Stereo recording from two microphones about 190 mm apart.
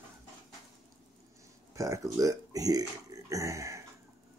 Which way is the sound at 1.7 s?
15° right (ahead or behind).